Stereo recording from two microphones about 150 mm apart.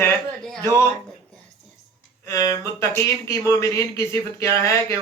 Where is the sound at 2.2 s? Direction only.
20° left (ahead or behind).